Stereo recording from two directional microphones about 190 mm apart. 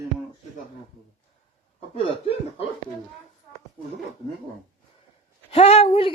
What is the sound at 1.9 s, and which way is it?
Chuckle, 30° left (ahead or behind).